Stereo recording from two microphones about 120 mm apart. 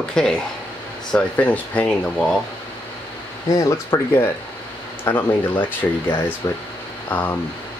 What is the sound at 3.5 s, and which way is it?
Speech, 30° left (ahead or behind).